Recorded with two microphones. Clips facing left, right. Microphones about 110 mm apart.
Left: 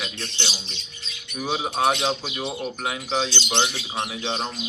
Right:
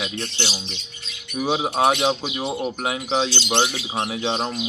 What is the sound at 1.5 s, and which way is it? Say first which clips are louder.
Speech: right 4 dB; 30° right (ahead or behind).